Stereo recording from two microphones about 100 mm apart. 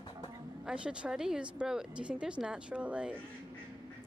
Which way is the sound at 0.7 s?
10° right (ahead or behind).